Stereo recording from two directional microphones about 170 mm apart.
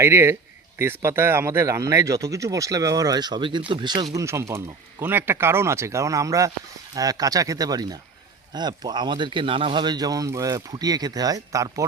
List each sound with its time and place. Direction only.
0.0 s speech: 15° right (ahead or behind)
4.1 s speech: 15° right (ahead or behind)